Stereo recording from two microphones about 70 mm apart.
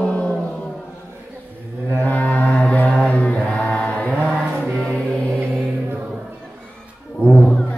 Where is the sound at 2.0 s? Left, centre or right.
Left.